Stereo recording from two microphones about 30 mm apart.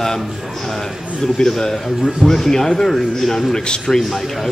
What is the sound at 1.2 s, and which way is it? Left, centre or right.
Speech, centre.